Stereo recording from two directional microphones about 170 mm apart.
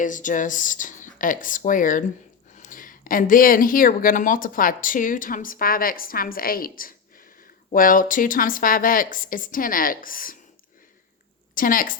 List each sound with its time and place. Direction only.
0.0 s speech: 50° left (ahead or behind)
11.5 s a woman's voice: 55° left (ahead or behind)